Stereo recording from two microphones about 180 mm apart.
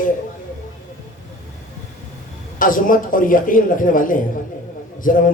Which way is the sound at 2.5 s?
50° left (ahead or behind).